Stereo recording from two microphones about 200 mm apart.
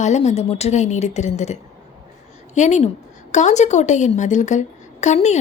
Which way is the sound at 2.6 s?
35° left (ahead or behind).